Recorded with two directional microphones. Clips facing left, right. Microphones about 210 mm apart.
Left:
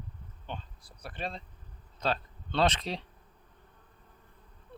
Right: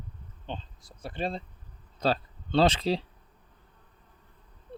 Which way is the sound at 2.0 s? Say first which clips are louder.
Right 5 dB; 30° right (ahead or behind).